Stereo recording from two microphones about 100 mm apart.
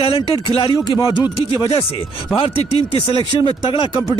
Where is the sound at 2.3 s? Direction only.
75° left (ahead or behind).